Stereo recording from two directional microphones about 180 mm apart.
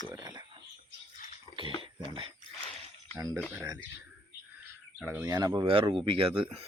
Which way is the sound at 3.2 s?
15° right (ahead or behind).